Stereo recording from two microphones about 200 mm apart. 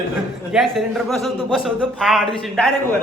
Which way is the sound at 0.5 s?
Centre (ahead or behind).